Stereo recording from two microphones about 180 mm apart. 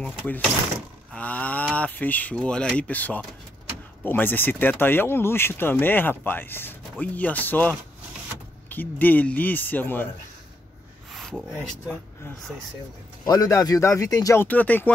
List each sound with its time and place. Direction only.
0.0 s speech: 5° left (ahead or behind)
11.1 s a sound: centre (ahead or behind)
11.5 s speech: 5° left (ahead or behind)
13.2 s speech: 20° left (ahead or behind)